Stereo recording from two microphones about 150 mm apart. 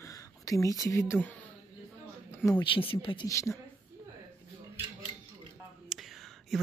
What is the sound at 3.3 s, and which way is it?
Speech, 20° left (ahead or behind).